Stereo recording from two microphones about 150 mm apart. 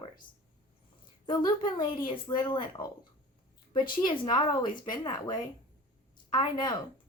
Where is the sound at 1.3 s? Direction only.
30° left (ahead or behind).